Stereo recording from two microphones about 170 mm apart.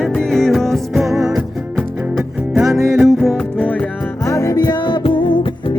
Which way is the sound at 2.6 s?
15° right (ahead or behind).